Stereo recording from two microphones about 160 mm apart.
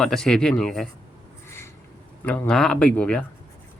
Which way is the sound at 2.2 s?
5° left (ahead or behind).